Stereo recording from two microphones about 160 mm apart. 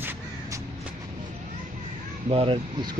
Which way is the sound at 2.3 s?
35° right (ahead or behind).